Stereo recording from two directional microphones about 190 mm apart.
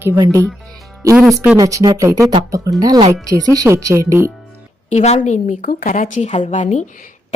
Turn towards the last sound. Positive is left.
turn(degrees=40)  # may be behind; listen again after turning